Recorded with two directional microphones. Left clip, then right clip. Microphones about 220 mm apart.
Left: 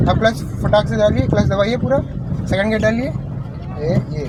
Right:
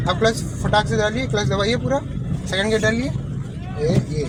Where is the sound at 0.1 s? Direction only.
25° left (ahead or behind).